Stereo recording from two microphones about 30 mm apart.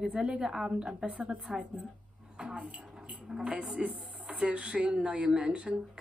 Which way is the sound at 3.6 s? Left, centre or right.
Right.